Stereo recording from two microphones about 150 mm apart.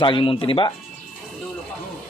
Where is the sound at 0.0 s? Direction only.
35° left (ahead or behind).